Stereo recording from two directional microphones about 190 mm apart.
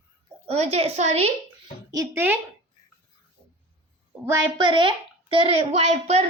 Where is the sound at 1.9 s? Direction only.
15° right (ahead or behind).